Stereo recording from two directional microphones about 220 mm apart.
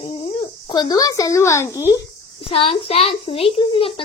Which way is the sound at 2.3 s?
25° left (ahead or behind).